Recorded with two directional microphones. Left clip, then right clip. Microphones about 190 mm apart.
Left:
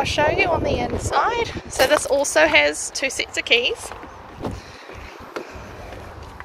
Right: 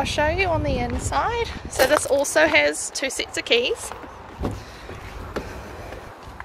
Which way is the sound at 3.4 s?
35° right (ahead or behind).